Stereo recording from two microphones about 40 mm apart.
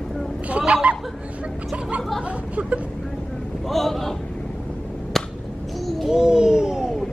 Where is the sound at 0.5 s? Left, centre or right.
Right.